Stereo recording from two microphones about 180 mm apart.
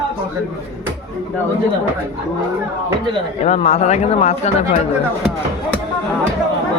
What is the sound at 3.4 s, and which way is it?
Speech, 35° left (ahead or behind).